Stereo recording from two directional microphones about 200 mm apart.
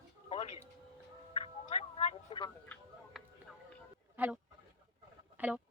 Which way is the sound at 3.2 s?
Centre (ahead or behind).